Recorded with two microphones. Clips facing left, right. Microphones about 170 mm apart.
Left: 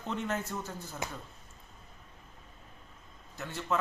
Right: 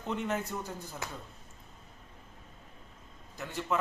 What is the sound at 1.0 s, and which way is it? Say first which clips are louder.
Speech: left 4 dB; 20° left (ahead or behind).